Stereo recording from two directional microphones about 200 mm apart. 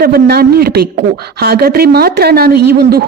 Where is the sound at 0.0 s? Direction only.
50° right (ahead or behind).